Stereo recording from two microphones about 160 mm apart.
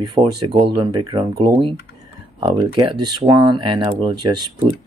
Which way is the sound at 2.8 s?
30° right (ahead or behind).